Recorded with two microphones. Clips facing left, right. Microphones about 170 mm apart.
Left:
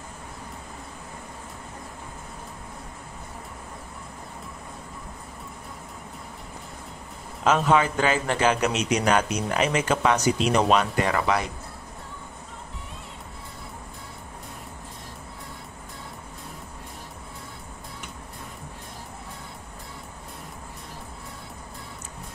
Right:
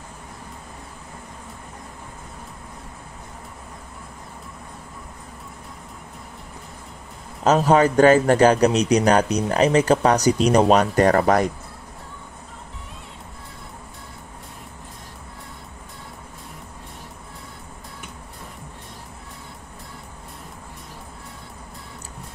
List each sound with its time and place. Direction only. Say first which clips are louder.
7.4 s a man's voice: right 5 dB; 40° right (ahead or behind)